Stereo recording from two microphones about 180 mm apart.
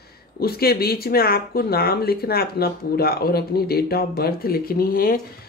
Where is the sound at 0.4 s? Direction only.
60° left (ahead or behind).